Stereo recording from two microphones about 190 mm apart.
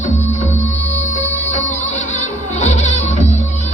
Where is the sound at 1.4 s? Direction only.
40° left (ahead or behind).